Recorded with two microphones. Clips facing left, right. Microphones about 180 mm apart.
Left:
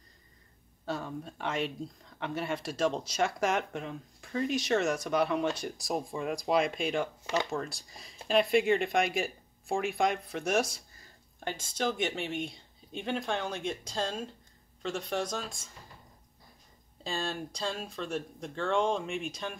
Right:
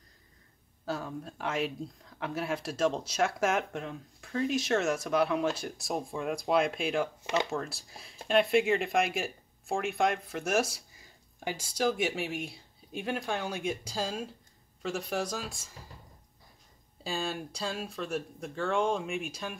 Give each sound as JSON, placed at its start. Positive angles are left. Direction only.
{"t": 0.8, "sound": "speech", "side_deg": 0}
{"t": 17.0, "sound": "speech", "side_deg": -5}